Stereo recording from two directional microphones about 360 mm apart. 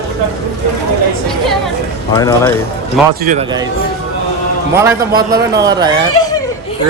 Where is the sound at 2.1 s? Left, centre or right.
Centre.